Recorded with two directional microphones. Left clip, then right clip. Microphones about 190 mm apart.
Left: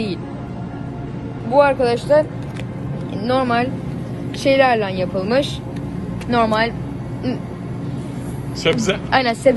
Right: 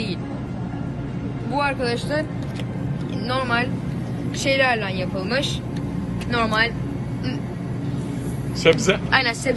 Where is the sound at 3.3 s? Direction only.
50° left (ahead or behind).